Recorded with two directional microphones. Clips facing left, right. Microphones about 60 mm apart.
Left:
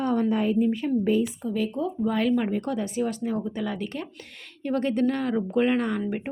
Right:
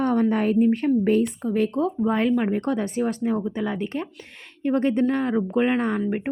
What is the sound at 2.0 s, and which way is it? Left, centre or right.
Speech, right.